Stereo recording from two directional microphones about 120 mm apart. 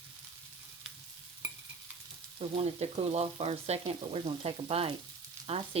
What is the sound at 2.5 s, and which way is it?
Frying, 60° right (ahead or behind).